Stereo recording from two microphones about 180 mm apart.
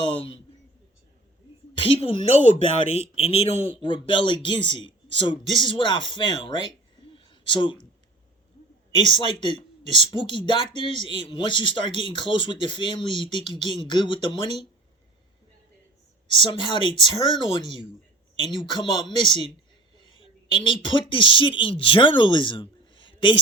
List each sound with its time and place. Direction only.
1.7 s a sound: 30° left (ahead or behind)
2.1 s speech: 40° right (ahead or behind)
2.9 s speech: 35° left (ahead or behind)
7.0 s a sound: 30° left (ahead or behind)
9.0 s speech: 25° left (ahead or behind)
16.2 s speech: 25° left (ahead or behind)